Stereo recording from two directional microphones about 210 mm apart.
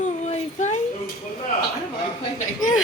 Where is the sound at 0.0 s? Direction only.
35° left (ahead or behind).